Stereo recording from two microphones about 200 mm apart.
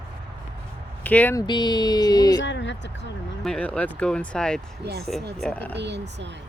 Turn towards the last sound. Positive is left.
turn(degrees=-60)  # may be behind; listen again after turning